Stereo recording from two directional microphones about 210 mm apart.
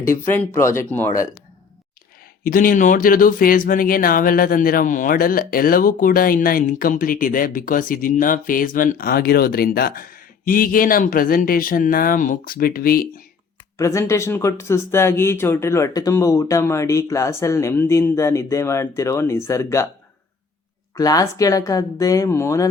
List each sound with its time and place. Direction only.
0.0 s speech: 10° left (ahead or behind)
2.4 s speech: 40° left (ahead or behind)
13.7 s speech: 15° left (ahead or behind)
20.9 s speech: 15° left (ahead or behind)